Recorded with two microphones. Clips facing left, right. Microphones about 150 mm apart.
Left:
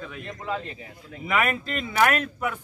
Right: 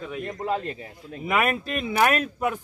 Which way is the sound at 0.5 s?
45° right (ahead or behind).